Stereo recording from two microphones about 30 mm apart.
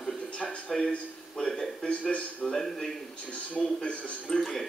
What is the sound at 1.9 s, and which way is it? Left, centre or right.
Speech, left.